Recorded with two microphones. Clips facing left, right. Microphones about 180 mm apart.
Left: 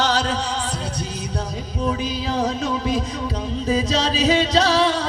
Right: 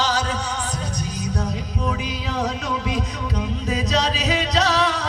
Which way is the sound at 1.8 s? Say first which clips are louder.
Left 5 dB; 30° left (ahead or behind).